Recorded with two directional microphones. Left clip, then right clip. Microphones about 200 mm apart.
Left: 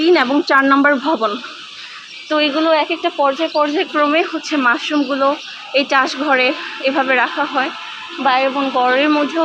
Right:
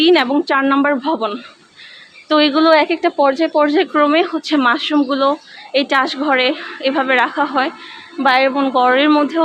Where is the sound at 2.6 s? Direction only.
45° right (ahead or behind); by 7.7 s 25° right (ahead or behind).